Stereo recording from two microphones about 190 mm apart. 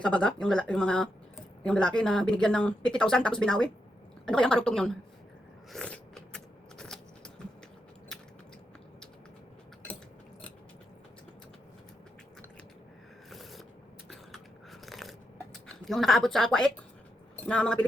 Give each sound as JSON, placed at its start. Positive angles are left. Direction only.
{"t": 0.0, "sound": "speech", "side_deg": 5}
{"t": 5.7, "sound": "a sound", "side_deg": 5}
{"t": 13.3, "sound": "mechanisms", "side_deg": 0}
{"t": 14.1, "sound": "biting", "side_deg": 0}
{"t": 15.6, "sound": "speech", "side_deg": 0}